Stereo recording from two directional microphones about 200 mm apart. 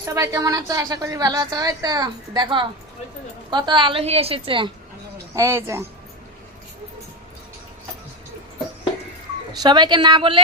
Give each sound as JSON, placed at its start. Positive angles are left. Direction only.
{"t": 0.0, "sound": "a woman's voice", "side_deg": -15}
{"t": 5.3, "sound": "a woman's voice", "side_deg": -15}
{"t": 9.5, "sound": "a woman's voice", "side_deg": -20}